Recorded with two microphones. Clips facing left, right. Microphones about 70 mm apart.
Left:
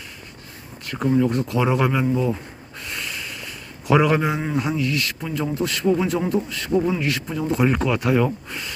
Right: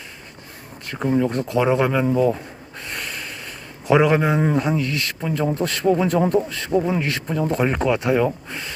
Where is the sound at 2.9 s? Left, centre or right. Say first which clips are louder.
Even; right.